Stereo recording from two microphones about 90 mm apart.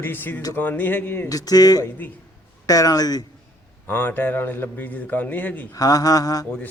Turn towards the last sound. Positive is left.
turn(degrees=40)  # may be behind; listen again after turning